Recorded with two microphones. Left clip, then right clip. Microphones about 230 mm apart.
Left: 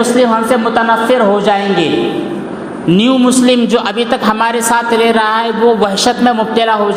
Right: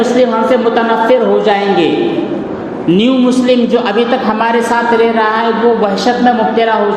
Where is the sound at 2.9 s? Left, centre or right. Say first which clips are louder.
Even; left.